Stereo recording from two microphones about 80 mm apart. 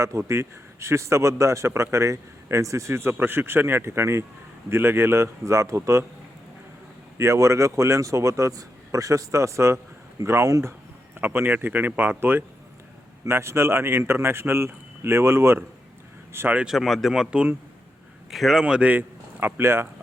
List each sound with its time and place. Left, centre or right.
0.0 s a man's voice: right
7.2 s a man's voice: right
16.6 s a man's voice: centre
18.6 s speech: centre